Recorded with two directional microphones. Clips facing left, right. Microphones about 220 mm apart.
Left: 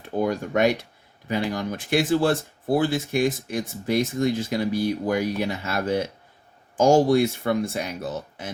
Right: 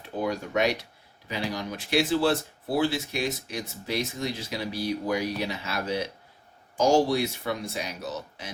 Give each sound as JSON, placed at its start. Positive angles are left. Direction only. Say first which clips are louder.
{"t": 0.0, "sound": "speech", "louder": "left 5 dB", "side_deg": 50}